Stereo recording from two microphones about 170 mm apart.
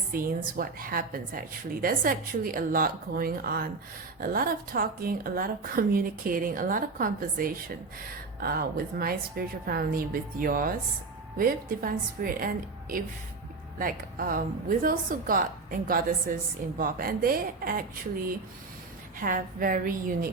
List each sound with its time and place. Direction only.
0.1 s a woman's voice: 60° right (ahead or behind)
13.7 s a woman's voice: 55° right (ahead or behind)
19.2 s a woman's voice: 55° right (ahead or behind)